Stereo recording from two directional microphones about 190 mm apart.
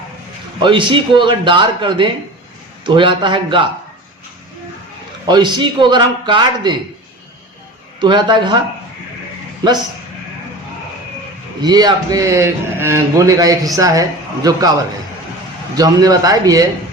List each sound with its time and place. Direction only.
0.6 s a man's voice: 25° right (ahead or behind)
5.2 s a man's voice: 25° right (ahead or behind)
8.0 s a man's voice: 25° right (ahead or behind)
11.6 s a man's voice: 20° right (ahead or behind)
15.7 s a man's voice: 20° right (ahead or behind)